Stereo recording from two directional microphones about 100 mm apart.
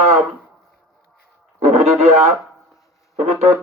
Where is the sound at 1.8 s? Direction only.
90° right.